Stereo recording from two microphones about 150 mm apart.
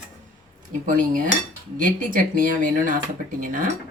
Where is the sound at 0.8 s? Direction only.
65° right (ahead or behind).